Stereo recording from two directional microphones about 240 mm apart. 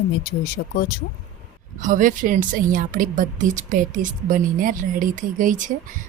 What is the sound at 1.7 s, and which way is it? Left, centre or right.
A woman's voice, right.